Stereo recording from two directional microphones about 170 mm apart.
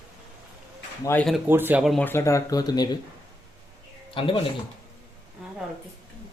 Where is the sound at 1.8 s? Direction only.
Centre (ahead or behind).